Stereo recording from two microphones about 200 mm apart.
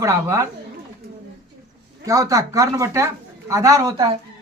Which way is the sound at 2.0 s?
15° right (ahead or behind).